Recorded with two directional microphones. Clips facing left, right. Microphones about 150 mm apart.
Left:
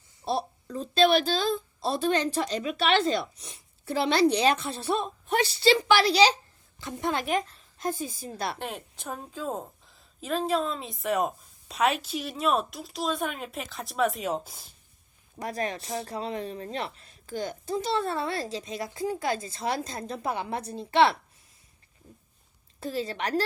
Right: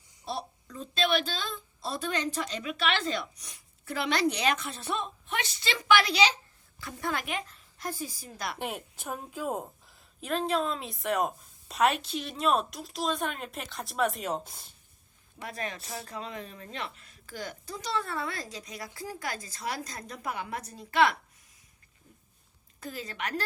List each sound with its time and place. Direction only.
0.3 s a woman's voice: 30° left (ahead or behind)
6.7 s a woman's voice: 20° left (ahead or behind)
7.3 s a woman's voice: 35° left (ahead or behind)
8.5 s a woman's voice: 15° right (ahead or behind)
15.4 s a woman's voice: 35° left (ahead or behind)
22.8 s a woman's voice: 30° left (ahead or behind)